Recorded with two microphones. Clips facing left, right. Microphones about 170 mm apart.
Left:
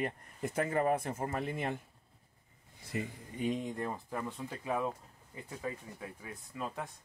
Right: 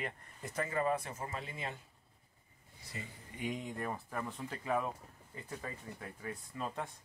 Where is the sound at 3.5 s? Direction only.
20° left (ahead or behind).